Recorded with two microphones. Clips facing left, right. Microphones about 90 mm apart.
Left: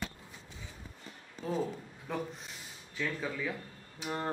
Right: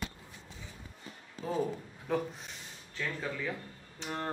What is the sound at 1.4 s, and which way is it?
Speech, centre (ahead or behind).